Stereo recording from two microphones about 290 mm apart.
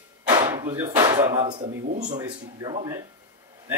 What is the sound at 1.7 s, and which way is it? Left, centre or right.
Speech, right.